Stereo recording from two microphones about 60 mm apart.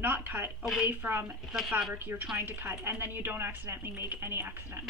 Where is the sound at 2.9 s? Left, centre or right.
Right.